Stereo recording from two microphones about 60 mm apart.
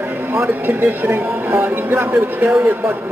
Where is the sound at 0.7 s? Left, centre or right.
Right.